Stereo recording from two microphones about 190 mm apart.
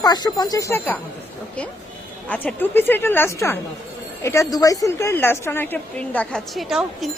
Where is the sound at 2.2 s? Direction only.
10° left (ahead or behind).